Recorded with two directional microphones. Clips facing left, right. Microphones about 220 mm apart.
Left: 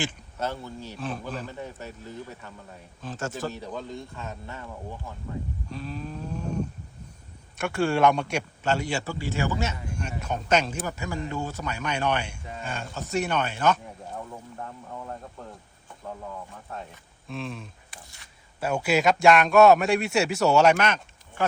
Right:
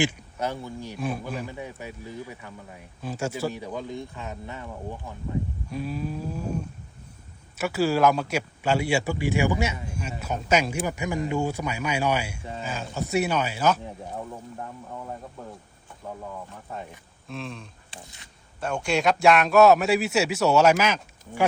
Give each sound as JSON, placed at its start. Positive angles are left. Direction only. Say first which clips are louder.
{"t": 0.0, "sound": "a man's voice", "louder": "right 4 dB", "side_deg": -15}
{"t": 7.6, "sound": "a man's voice", "louder": "right 1 dB", "side_deg": -5}
{"t": 17.2, "sound": "a man's voice", "louder": "left 1 dB", "side_deg": 0}
{"t": 17.9, "sound": "speech", "louder": "right 9 dB", "side_deg": -25}
{"t": 18.6, "sound": "a man's voice", "louder": "left 1 dB", "side_deg": 5}